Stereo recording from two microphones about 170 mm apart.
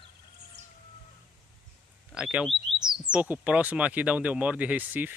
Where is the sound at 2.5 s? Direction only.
35° right (ahead or behind).